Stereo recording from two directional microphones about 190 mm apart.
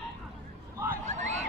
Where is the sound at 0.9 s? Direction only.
40° right (ahead or behind).